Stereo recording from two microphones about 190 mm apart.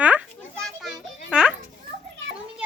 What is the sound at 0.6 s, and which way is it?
Children playing, centre (ahead or behind).